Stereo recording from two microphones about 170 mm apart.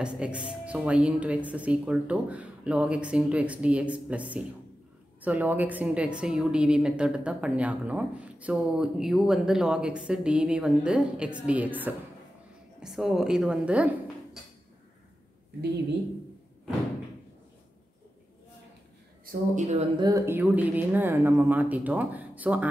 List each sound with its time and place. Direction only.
0.0 s a woman's voice: 5° right (ahead or behind)
19.2 s speech: 45° right (ahead or behind)
20.0 s a woman's voice: 20° right (ahead or behind)